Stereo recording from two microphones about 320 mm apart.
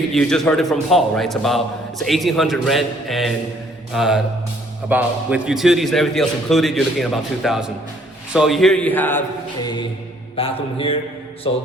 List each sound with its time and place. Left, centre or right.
0.1 s a man's voice: centre
10.3 s mantra: centre